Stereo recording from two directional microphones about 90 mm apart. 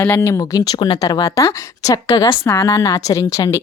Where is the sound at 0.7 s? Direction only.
60° left (ahead or behind).